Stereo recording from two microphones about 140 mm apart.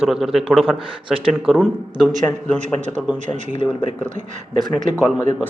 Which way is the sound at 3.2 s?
55° right (ahead or behind).